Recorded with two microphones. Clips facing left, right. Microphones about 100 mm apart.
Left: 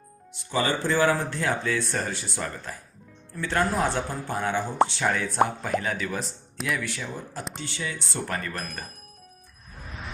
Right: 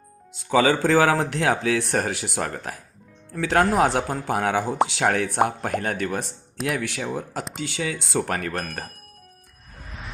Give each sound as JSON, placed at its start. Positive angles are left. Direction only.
{"t": 0.5, "sound": "speech", "side_deg": -90}
{"t": 3.3, "sound": "speech", "side_deg": -85}
{"t": 4.9, "sound": "speech", "side_deg": -75}
{"t": 6.7, "sound": "speech", "side_deg": -65}